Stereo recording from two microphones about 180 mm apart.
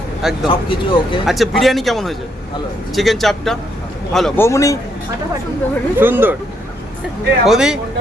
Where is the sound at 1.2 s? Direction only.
Centre (ahead or behind).